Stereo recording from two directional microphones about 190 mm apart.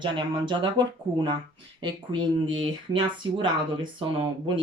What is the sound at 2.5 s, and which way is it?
Speech, 25° right (ahead or behind).